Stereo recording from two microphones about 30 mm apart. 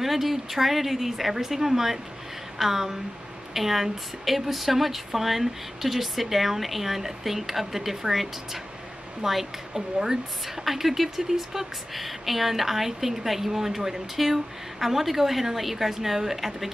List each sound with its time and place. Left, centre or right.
0.0 s a woman's voice: centre
10.6 s a woman's voice: centre